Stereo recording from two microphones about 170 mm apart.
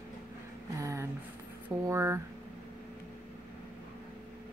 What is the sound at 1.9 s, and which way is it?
Speech, 15° right (ahead or behind).